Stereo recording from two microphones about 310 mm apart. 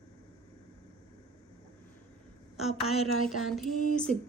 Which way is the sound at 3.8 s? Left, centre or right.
Left.